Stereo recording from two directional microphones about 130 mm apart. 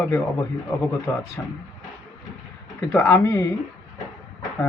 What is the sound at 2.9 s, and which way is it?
Speech, 20° left (ahead or behind).